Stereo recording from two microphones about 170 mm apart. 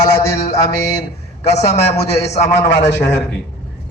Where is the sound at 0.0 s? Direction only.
15° left (ahead or behind).